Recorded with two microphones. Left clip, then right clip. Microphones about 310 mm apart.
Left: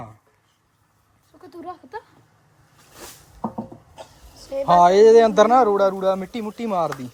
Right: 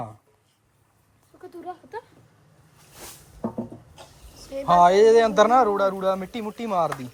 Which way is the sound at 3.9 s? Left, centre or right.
Left.